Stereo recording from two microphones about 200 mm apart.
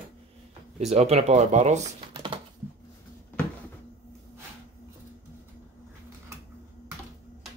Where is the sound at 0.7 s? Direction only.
30° right (ahead or behind).